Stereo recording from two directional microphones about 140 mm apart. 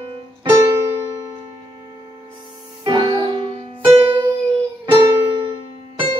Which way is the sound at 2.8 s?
35° right (ahead or behind).